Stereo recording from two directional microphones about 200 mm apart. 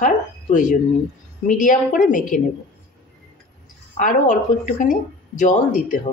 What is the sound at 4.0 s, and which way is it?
A woman's voice, 40° left (ahead or behind).